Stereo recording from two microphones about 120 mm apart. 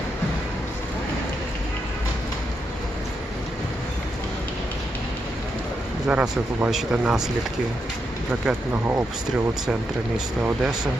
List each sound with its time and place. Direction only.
6.1 s speech: 10° right (ahead or behind)
8.3 s speech: 15° right (ahead or behind)
10.4 s speech: 10° right (ahead or behind)